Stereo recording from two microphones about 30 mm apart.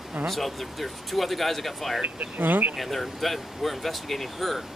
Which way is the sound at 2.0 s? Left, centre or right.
Right.